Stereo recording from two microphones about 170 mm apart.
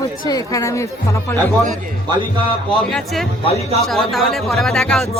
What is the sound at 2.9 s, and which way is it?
Speech, centre (ahead or behind).